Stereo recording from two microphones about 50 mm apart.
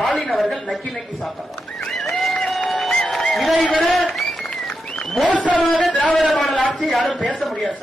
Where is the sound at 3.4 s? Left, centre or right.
Centre.